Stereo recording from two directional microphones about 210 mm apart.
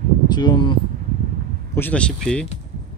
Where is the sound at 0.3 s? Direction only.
20° left (ahead or behind).